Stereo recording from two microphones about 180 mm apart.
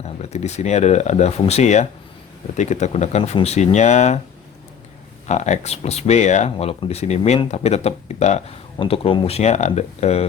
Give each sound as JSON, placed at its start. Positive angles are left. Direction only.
{"t": 0.0, "sound": "speech", "side_deg": 35}
{"t": 5.3, "sound": "speech", "side_deg": 40}